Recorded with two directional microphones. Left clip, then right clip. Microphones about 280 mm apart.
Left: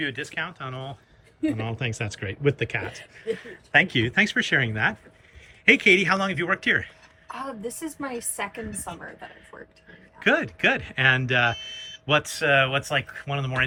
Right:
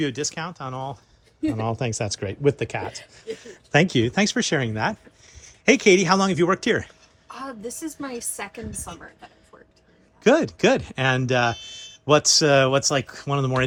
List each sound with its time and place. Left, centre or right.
0.0 s speech: centre
7.3 s a woman's voice: centre
10.2 s speech: centre